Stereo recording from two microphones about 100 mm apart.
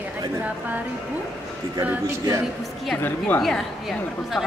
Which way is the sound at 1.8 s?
20° right (ahead or behind).